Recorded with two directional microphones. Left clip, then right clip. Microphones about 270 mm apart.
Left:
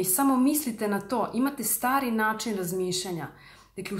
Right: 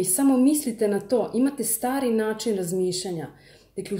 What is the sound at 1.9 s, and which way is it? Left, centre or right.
Speech, left.